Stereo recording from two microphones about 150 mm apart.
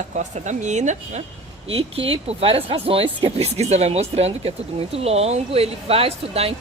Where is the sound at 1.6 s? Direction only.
40° right (ahead or behind).